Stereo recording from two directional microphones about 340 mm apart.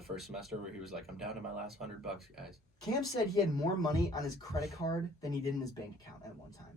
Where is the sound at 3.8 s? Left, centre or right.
Centre.